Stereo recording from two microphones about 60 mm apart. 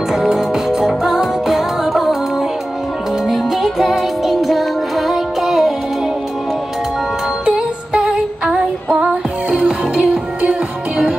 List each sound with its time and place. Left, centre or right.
0.1 s music: centre
3.3 s music: centre
7.4 s music: centre
8.8 s music: right